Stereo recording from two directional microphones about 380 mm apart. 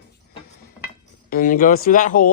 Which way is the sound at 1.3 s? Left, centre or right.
Left.